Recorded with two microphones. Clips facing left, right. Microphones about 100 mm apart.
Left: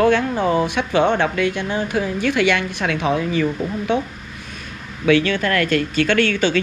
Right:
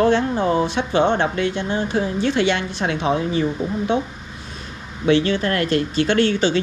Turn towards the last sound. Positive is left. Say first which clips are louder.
# even
turn(degrees=-20)  # may be behind; listen again after turning